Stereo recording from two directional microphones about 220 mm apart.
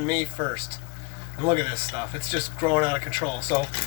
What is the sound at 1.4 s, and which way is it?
Speech, 20° right (ahead or behind).